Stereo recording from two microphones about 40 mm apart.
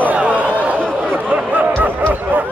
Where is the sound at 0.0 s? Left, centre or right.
Right.